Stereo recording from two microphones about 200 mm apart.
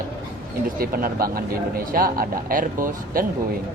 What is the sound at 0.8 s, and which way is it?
A man's voice, 45° right (ahead or behind).